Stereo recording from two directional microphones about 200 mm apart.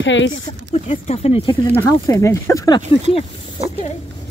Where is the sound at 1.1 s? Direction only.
30° left (ahead or behind).